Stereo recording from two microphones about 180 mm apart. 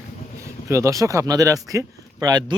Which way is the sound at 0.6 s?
15° right (ahead or behind).